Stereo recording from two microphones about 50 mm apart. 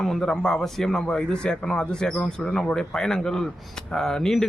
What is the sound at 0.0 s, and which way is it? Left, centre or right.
A man's voice, centre.